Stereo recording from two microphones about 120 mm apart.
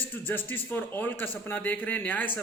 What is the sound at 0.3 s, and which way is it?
A man's voice, 15° left (ahead or behind).